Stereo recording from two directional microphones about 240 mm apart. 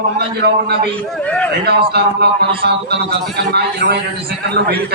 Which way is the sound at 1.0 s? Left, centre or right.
Centre.